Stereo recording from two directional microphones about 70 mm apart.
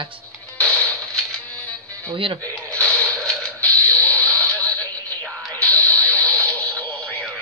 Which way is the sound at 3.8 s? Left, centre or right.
Left.